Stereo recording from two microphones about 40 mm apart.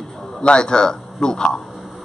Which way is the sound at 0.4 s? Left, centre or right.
Left.